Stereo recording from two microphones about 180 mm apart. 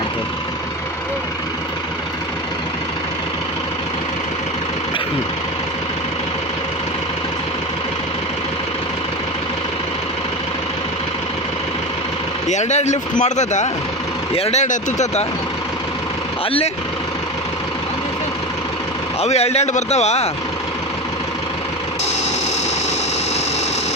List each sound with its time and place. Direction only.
12.5 s speech: 40° left (ahead or behind)
19.2 s speech: 35° left (ahead or behind)